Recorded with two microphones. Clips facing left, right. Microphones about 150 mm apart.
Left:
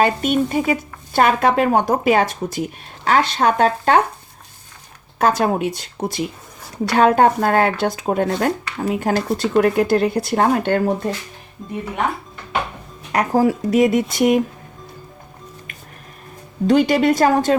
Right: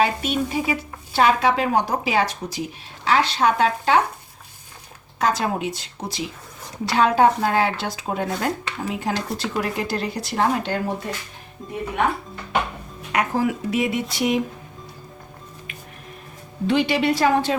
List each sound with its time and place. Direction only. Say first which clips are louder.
0.0 s speech: left 4 dB; 50° left (ahead or behind)
5.2 s speech: left 5 dB; 55° left (ahead or behind)
11.6 s speech: left 3 dB; centre (ahead or behind)
13.1 s speech: left 5 dB; 35° left (ahead or behind)
16.6 s speech: left 5 dB; 45° left (ahead or behind)